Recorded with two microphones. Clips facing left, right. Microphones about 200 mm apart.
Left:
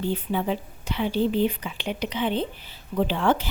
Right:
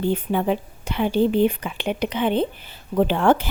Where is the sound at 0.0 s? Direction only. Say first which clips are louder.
Right 4 dB; 55° right (ahead or behind).